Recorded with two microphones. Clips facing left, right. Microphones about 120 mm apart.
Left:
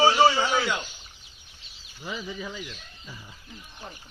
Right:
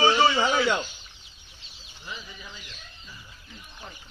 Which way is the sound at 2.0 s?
90° left.